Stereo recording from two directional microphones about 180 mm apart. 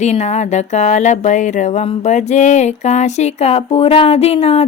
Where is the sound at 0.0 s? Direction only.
40° left (ahead or behind).